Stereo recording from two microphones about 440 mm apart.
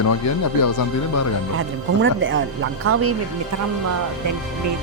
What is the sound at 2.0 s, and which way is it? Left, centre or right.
Speech, right.